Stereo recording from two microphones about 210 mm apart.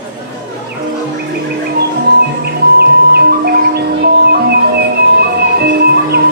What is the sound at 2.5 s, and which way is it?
Music, 50° right (ahead or behind).